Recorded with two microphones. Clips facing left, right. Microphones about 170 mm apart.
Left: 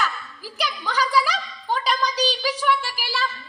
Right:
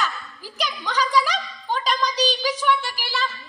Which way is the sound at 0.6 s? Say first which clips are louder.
Even; 10° left (ahead or behind).